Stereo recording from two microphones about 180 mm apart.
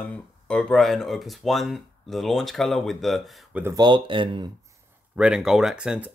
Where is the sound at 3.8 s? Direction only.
25° right (ahead or behind).